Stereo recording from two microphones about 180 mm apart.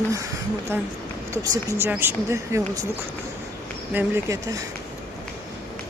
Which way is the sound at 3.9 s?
15° right (ahead or behind).